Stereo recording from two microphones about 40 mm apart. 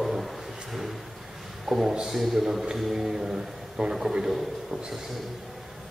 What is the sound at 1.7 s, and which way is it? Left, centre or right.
A man's voice, centre.